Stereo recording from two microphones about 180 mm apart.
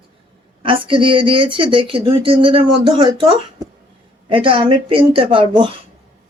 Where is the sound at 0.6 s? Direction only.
30° right (ahead or behind).